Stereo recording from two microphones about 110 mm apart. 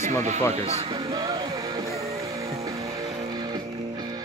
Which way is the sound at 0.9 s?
40° right (ahead or behind).